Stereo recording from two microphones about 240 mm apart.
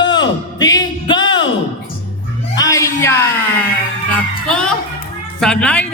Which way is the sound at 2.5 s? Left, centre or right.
Centre.